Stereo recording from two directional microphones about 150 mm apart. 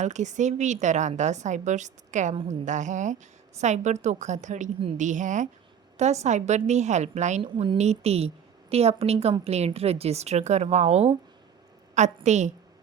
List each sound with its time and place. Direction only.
0.0 s a woman's voice: 50° right (ahead or behind)
7.5 s speech: 35° right (ahead or behind)
7.8 s a woman's voice: 45° right (ahead or behind)